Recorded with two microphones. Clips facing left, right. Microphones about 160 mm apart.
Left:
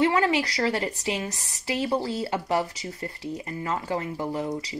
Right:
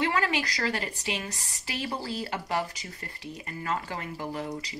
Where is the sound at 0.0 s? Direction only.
25° left (ahead or behind).